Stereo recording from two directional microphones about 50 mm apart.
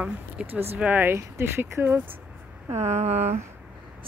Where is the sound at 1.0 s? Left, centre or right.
Right.